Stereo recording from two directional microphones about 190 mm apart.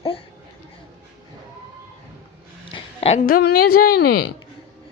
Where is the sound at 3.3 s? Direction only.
50° left (ahead or behind).